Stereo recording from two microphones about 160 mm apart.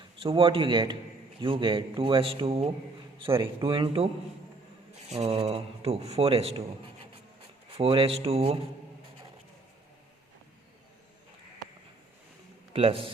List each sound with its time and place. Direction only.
0.2 s a man's voice: 35° right (ahead or behind)
12.7 s a man's voice: 35° right (ahead or behind)